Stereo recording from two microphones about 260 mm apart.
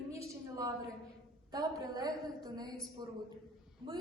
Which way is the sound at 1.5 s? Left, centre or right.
Centre.